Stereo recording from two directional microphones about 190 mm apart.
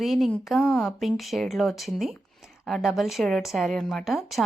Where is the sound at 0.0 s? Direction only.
Centre (ahead or behind).